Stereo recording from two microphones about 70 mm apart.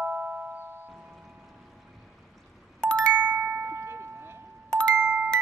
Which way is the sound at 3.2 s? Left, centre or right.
Right.